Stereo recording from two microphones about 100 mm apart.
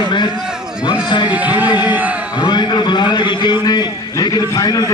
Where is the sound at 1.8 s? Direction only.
15° right (ahead or behind).